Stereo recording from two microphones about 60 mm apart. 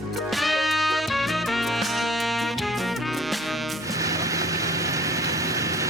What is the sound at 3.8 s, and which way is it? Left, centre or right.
Vehicle, right.